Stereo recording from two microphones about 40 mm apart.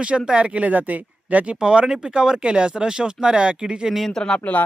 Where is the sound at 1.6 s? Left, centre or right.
Right.